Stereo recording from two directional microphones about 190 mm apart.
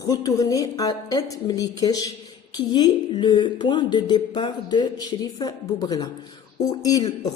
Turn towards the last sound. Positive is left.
turn(degrees=20)  # may be behind; listen again after turning